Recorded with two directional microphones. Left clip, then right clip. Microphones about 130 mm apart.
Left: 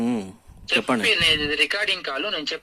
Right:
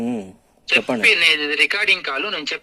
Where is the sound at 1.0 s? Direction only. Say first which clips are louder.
Right 6 dB; 25° right (ahead or behind).